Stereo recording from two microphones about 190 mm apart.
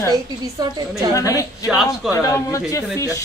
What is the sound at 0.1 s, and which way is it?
A woman's voice, 20° right (ahead or behind).